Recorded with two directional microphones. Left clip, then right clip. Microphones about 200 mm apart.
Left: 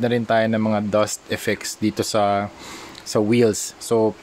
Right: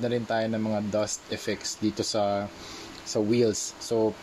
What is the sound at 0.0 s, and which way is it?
Speech, 35° left (ahead or behind).